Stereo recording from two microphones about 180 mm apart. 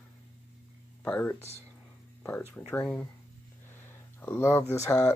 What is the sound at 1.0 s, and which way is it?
Speech, 10° left (ahead or behind).